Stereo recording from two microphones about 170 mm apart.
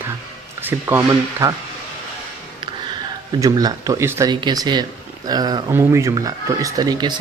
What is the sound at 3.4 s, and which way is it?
Speech, 20° right (ahead or behind).